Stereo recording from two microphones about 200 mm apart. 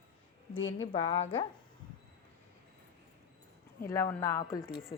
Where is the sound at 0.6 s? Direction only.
80° left.